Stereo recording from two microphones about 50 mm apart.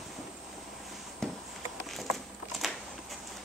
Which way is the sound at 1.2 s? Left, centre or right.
Centre.